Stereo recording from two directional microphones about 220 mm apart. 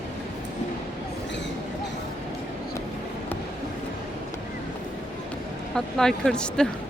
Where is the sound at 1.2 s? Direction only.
55° left (ahead or behind).